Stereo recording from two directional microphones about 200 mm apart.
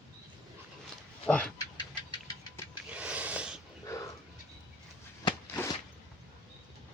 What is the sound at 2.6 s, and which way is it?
Music, 10° left (ahead or behind).